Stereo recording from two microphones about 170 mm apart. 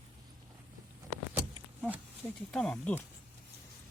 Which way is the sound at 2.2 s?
5° left (ahead or behind).